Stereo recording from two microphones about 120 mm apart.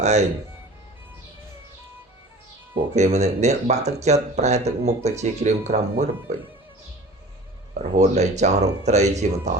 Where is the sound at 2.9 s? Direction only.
70° right (ahead or behind).